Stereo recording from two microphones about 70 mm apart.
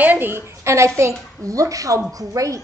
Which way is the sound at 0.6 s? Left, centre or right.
Right.